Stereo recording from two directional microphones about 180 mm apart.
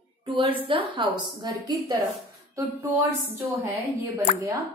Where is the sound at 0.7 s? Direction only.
30° right (ahead or behind).